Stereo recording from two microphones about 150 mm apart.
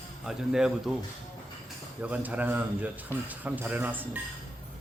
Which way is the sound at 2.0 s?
10° right (ahead or behind).